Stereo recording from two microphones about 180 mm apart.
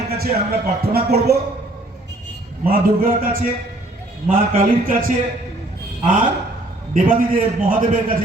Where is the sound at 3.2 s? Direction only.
55° right (ahead or behind).